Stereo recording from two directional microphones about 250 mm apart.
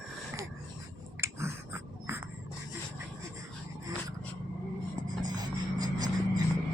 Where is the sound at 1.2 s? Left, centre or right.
Centre.